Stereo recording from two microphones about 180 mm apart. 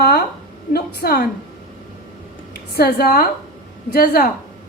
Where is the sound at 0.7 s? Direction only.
55° left (ahead or behind).